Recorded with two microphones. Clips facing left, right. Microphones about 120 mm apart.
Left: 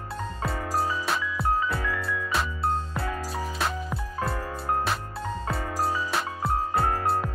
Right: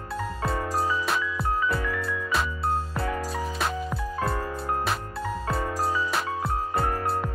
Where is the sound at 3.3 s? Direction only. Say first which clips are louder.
Right 1 dB; centre (ahead or behind).